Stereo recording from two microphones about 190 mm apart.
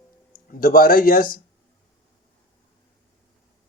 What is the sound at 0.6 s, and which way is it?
Speech, 50° left (ahead or behind).